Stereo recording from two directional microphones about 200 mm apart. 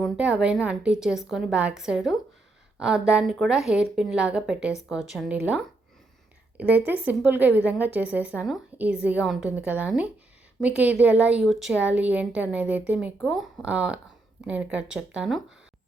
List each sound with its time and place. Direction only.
0.0 s a woman's voice: 5° right (ahead or behind)